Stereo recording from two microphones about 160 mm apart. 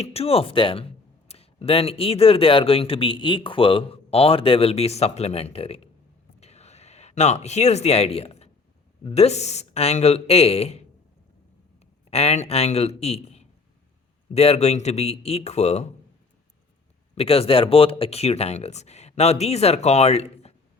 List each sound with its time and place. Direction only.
0.0 s speech: 40° left (ahead or behind)
6.4 s a sound: 40° left (ahead or behind)
9.1 s speech: 40° left (ahead or behind)
12.1 s speech: 40° left (ahead or behind)
17.2 s speech: 40° left (ahead or behind)